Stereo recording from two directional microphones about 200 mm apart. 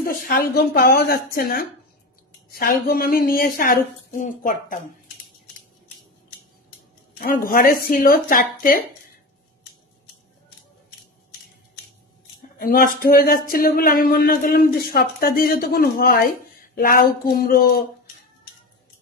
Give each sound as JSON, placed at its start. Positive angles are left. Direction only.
{"t": 0.0, "sound": "speech", "side_deg": 45}
{"t": 7.2, "sound": "speech", "side_deg": 45}
{"t": 12.4, "sound": "speech", "side_deg": 45}